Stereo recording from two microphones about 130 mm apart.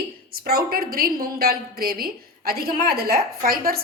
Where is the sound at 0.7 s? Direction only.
90° right.